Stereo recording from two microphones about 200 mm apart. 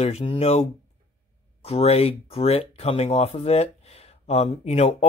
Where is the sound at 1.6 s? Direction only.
30° left (ahead or behind).